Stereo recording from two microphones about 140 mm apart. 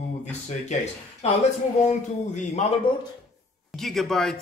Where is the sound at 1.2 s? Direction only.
50° left (ahead or behind).